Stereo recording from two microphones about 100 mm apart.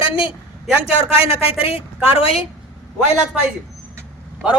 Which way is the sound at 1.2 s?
70° left (ahead or behind).